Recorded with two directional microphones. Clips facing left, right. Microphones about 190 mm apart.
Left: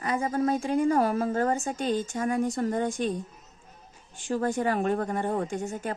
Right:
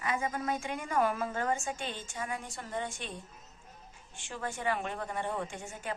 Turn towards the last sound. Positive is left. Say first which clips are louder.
# left 9 dB
turn(degrees=40)  # may be behind; listen again after turning